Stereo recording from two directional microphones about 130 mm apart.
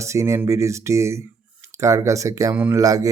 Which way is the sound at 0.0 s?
20° right (ahead or behind).